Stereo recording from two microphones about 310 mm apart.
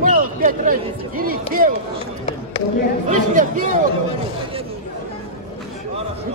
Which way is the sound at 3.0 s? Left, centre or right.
Right.